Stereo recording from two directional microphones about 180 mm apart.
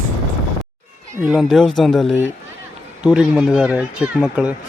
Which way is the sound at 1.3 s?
Centre (ahead or behind).